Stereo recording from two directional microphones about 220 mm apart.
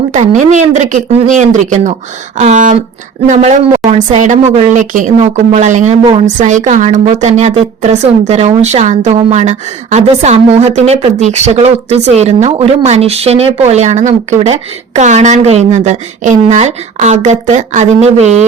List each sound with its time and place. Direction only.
0.1 s a woman's voice: 35° right (ahead or behind)